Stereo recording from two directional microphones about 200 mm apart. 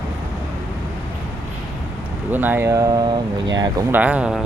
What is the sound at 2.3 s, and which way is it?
Speech, 10° right (ahead or behind).